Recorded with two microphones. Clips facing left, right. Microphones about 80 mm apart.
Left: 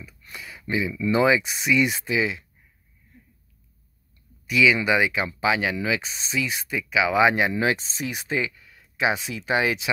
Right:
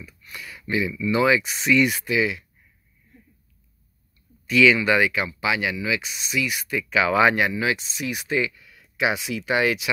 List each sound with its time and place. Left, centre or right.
0.2 s a sound: left
1.1 s speech: left
4.5 s speech: centre
6.9 s speech: centre
7.5 s speech: left